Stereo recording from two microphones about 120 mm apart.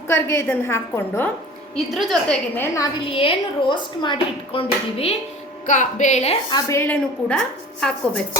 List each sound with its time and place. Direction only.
0.1 s a woman's voice: 20° left (ahead or behind)
1.7 s a woman's voice: 5° left (ahead or behind)
2.6 s a woman's voice: 25° left (ahead or behind)
3.0 s a woman's voice: 50° left (ahead or behind)
5.6 s speech: 90° left; by 6.3 s 70° left (ahead or behind)
6.5 s a woman's voice: 30° left (ahead or behind); by 8.2 s 10° left (ahead or behind)